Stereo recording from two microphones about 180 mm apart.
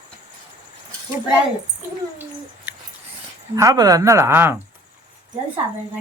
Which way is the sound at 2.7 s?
10° right (ahead or behind).